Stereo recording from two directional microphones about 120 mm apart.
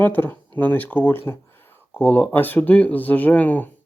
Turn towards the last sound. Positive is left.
turn(degrees=15)  # may be behind; listen again after turning